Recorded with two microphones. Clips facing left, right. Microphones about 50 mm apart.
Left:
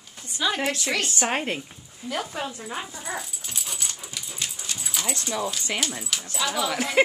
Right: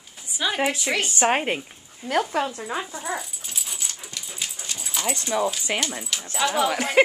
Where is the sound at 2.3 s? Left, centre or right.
Right.